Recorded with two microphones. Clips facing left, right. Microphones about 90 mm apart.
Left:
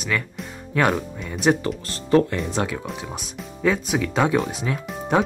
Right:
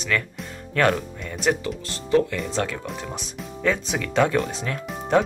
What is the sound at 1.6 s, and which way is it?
Speech, 45° left (ahead or behind).